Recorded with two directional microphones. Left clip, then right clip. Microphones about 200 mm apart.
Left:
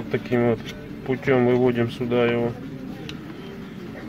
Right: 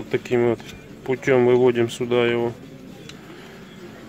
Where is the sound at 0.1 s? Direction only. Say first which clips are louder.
Right 2 dB; 45° right (ahead or behind).